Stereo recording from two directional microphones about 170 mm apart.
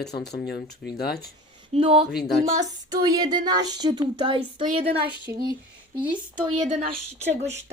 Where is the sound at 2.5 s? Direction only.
20° right (ahead or behind).